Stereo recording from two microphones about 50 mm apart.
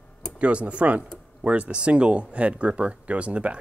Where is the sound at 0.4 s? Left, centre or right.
Right.